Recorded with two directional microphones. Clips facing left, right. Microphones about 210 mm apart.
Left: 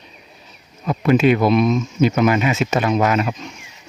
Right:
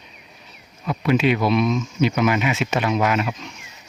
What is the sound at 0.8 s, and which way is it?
Speech, 45° left (ahead or behind).